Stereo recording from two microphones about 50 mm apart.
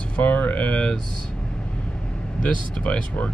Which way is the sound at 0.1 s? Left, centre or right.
Left.